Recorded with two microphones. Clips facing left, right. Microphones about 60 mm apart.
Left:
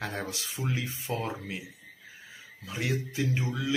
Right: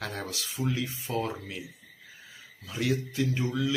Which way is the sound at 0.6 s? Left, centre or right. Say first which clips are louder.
Right 3 dB; left.